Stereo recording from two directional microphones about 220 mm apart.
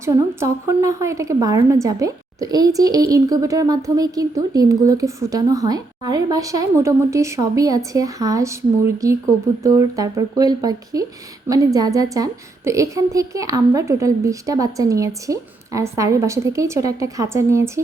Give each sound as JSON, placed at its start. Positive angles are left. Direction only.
{"t": 0.0, "sound": "a woman's voice", "side_deg": -15}